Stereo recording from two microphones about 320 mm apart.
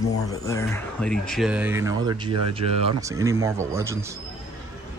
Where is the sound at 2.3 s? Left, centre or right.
Right.